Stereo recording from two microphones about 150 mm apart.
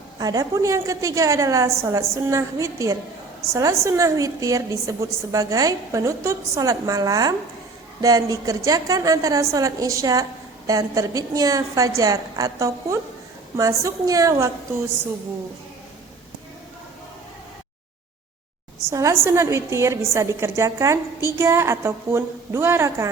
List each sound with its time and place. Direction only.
0.2 s a woman's voice: 25° right (ahead or behind)
18.9 s a woman's voice: 20° right (ahead or behind)